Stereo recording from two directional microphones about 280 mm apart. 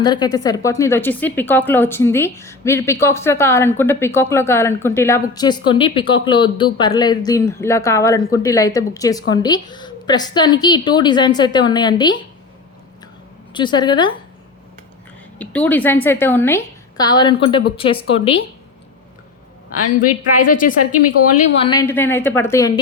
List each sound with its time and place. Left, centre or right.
0.0 s speech: centre
13.5 s speech: centre
15.4 s speech: centre
19.7 s a woman's voice: left
21.6 s speech: centre